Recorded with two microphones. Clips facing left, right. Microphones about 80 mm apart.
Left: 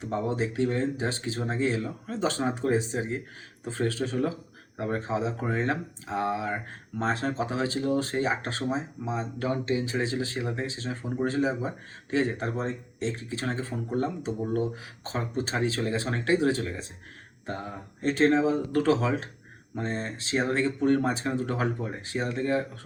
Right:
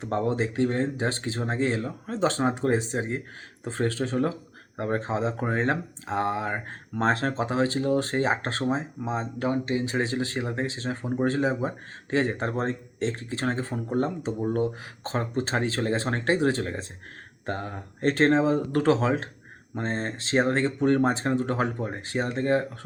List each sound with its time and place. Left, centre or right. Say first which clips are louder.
0.3 s speech: right 1 dB; right
7.3 s speech: right 3 dB; right
17.4 s speech: right 3 dB; right